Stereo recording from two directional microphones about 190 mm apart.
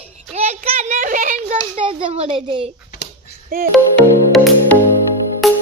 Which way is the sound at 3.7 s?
Centre (ahead or behind).